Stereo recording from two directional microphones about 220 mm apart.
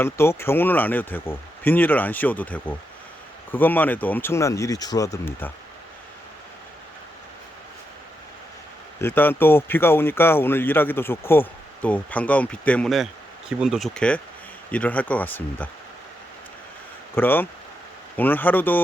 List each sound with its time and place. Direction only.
0.0 s speech: 10° left (ahead or behind)
9.0 s speech: 10° left (ahead or behind)
17.2 s speech: 10° left (ahead or behind)